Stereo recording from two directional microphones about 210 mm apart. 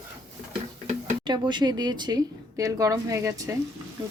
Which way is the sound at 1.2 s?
20° right (ahead or behind).